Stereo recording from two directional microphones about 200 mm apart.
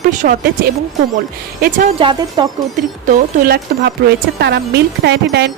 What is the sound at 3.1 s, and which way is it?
Speech, 50° right (ahead or behind).